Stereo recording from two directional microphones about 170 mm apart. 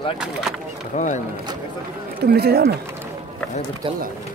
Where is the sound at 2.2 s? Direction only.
65° right (ahead or behind).